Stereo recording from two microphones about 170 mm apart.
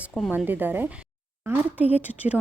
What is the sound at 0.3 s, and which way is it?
A woman's voice, 10° right (ahead or behind).